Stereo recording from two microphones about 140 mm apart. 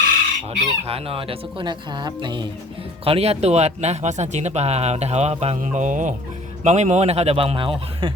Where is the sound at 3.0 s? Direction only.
45° right (ahead or behind).